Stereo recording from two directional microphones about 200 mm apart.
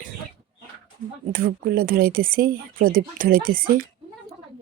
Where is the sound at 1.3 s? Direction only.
45° right (ahead or behind).